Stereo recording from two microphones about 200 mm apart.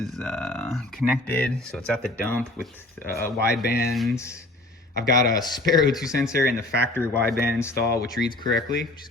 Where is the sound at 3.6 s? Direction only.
50° left (ahead or behind).